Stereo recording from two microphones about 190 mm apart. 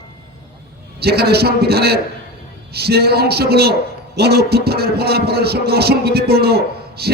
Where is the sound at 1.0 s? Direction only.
55° right (ahead or behind).